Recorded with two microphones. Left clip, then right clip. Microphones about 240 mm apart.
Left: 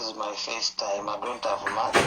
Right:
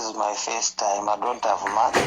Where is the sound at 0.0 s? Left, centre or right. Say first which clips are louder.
Right 6 dB; right.